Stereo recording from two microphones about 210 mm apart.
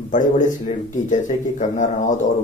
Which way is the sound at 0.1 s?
35° left (ahead or behind).